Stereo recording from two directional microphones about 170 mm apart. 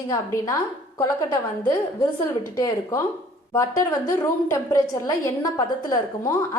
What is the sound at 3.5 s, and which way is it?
A woman's voice, 15° left (ahead or behind).